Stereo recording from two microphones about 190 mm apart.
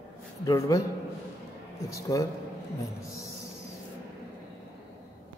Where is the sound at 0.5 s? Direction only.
15° left (ahead or behind).